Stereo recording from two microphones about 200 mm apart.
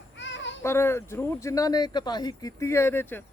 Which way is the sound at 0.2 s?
65° left (ahead or behind).